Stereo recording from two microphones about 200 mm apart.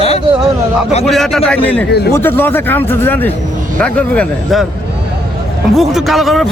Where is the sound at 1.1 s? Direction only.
Centre (ahead or behind).